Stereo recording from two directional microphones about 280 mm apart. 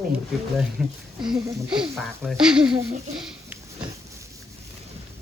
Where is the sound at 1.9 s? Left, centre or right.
Centre.